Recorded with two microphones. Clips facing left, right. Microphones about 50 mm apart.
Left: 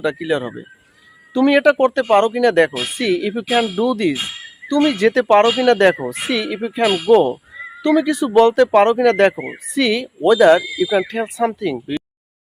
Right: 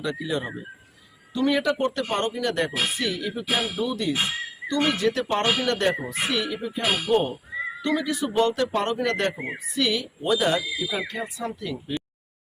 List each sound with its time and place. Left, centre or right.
0.0 s speech: left
1.3 s speech: left
1.9 s speech: left
3.0 s speech: left
5.5 s speech: left
5.8 s speech: left
7.8 s speech: left
8.4 s speech: left
9.2 s speech: left
11.4 s speech: left